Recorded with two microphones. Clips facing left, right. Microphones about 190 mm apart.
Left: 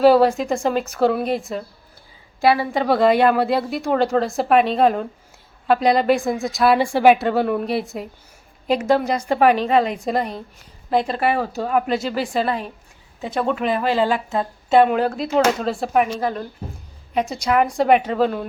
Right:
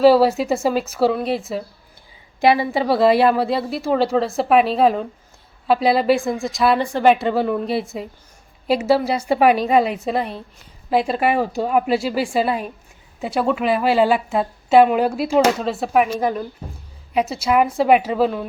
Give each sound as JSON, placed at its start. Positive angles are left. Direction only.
{"t": 0.0, "sound": "a woman's voice", "side_deg": -5}
{"t": 2.4, "sound": "a woman's voice", "side_deg": -15}
{"t": 2.8, "sound": "a woman's voice", "side_deg": 0}